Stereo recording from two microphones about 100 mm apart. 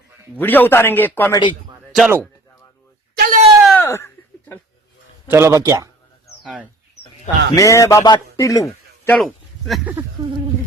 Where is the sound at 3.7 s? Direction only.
25° left (ahead or behind).